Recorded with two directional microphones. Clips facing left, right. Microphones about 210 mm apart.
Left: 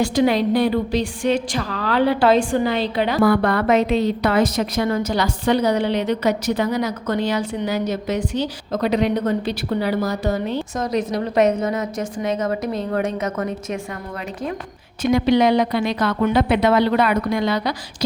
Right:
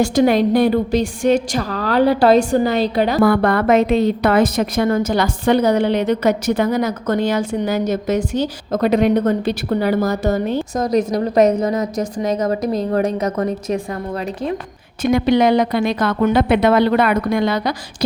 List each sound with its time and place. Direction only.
0.0 s a woman's voice: 45° right (ahead or behind)
15.0 s a woman's voice: 50° right (ahead or behind)